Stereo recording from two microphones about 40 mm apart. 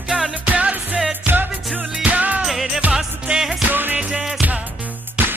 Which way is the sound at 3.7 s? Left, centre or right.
Right.